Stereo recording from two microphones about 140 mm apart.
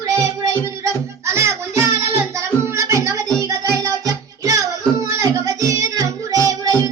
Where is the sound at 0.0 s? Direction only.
25° right (ahead or behind).